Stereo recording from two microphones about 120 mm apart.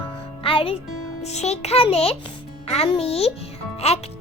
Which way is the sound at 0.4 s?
50° left (ahead or behind).